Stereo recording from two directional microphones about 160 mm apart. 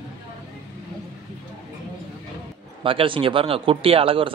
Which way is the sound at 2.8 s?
35° right (ahead or behind).